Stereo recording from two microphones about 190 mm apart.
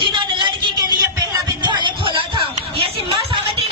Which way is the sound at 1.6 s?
25° right (ahead or behind).